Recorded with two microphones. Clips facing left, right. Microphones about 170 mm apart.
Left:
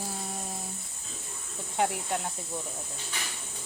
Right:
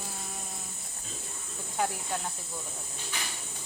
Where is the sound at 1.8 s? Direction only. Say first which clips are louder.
Left 3 dB; 25° left (ahead or behind).